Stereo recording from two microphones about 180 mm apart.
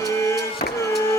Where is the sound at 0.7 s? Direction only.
15° left (ahead or behind).